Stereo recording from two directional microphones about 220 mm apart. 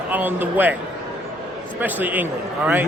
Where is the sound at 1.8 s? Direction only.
10° right (ahead or behind).